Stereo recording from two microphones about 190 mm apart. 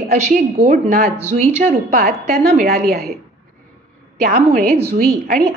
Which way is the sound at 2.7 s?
55° right (ahead or behind).